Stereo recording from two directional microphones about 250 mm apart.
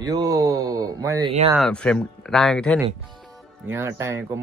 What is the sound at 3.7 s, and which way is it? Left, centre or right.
Speech, centre.